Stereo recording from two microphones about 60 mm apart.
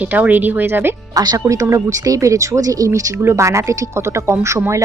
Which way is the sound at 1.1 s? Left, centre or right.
Right.